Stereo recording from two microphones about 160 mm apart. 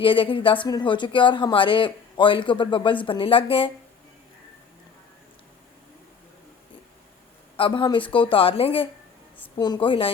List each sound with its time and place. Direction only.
0.0 s speech: 30° left (ahead or behind)
7.5 s a woman's voice: 30° left (ahead or behind)